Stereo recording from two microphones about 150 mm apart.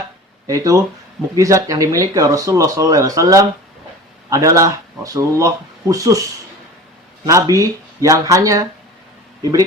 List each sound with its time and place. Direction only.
0.4 s speech: 20° right (ahead or behind)
7.3 s speech: 20° right (ahead or behind)